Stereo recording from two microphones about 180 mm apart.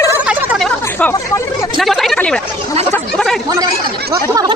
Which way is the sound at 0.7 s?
10° left (ahead or behind).